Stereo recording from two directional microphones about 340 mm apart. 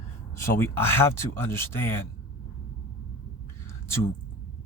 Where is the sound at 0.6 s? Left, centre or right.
Centre.